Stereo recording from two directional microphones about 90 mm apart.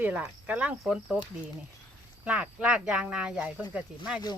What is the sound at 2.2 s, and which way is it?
Speech, 15° right (ahead or behind).